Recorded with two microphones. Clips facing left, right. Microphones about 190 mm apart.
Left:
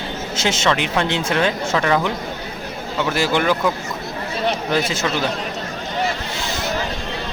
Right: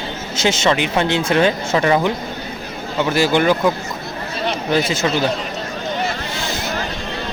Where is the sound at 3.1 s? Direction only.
Centre (ahead or behind).